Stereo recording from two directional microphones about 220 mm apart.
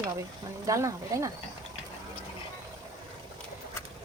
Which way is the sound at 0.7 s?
15° right (ahead or behind).